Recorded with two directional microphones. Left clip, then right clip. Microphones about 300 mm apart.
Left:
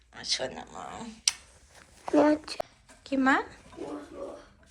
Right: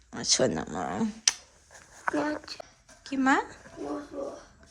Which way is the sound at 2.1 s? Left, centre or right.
Centre.